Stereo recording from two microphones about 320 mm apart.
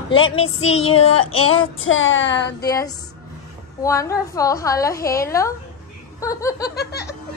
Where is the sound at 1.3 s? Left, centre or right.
Left.